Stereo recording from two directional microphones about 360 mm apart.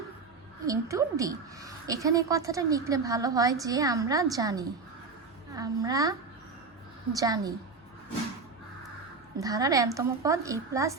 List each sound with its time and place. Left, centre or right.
0.6 s a woman's voice: centre
7.2 s a woman's voice: centre
9.4 s a woman's voice: centre